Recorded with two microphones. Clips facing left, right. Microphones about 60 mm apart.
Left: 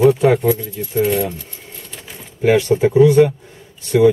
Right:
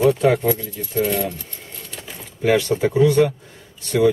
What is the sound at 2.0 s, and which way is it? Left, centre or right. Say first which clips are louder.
Speech: left 3 dB; centre.